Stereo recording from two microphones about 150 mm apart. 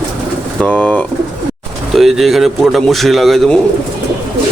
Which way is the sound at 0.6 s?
10° left (ahead or behind).